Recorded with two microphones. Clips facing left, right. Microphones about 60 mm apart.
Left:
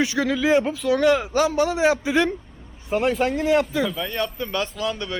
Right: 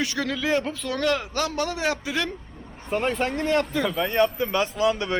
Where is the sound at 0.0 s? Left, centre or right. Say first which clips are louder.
Left 5 dB; centre.